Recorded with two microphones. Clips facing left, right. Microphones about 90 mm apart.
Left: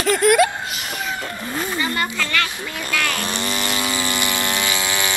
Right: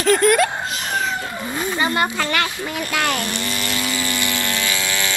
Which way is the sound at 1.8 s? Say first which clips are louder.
Right 6 dB; 25° right (ahead or behind).